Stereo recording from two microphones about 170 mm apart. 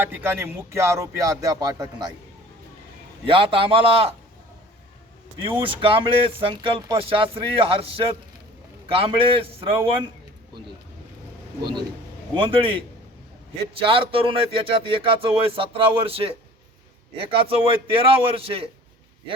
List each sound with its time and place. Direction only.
0.0 s speech: 10° right (ahead or behind)
3.2 s speech: 30° right (ahead or behind)
5.4 s speech: 30° right (ahead or behind)
12.3 s speech: 30° right (ahead or behind)
13.8 s speech: 30° right (ahead or behind)